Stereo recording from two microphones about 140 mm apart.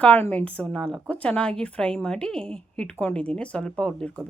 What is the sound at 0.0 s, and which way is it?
A woman's voice, 10° left (ahead or behind).